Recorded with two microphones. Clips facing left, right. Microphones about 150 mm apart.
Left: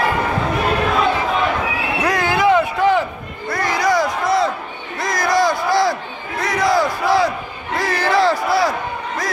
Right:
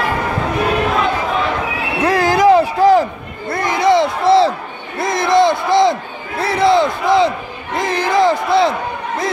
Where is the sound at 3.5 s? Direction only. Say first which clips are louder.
Right 4 dB; 25° right (ahead or behind).